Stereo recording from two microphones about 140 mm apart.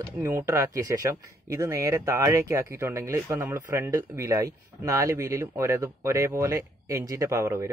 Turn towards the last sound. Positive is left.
turn(degrees=-20)  # may be behind; listen again after turning